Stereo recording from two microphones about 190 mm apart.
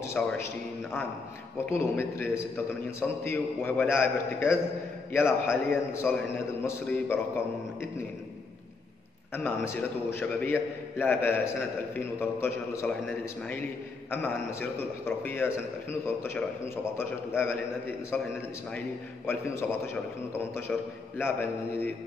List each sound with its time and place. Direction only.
0.0 s a man's voice: 10° left (ahead or behind)
1.7 s a man's voice: 10° left (ahead or behind)
9.3 s a man's voice: 10° left (ahead or behind)
20.7 s a man's voice: 5° left (ahead or behind)